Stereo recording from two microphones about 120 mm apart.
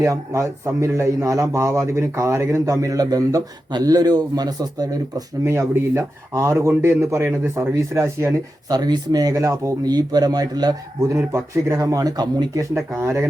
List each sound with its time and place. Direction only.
0.0 s a man's voice: 25° right (ahead or behind)
8.7 s speech: 35° right (ahead or behind)
13.0 s a man's voice: 20° right (ahead or behind)